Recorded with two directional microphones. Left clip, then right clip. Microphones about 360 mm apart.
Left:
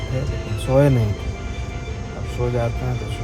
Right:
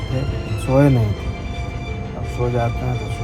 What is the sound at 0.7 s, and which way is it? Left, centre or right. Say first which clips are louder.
Speech: right 1 dB; centre.